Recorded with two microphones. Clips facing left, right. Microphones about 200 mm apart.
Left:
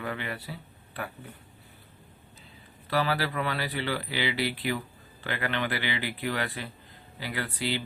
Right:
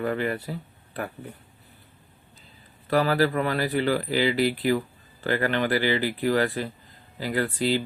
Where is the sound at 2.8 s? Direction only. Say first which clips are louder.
Right 6 dB; 45° right (ahead or behind).